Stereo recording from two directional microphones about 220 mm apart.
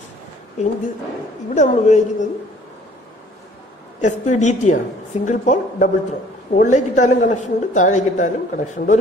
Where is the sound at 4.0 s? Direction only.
30° left (ahead or behind).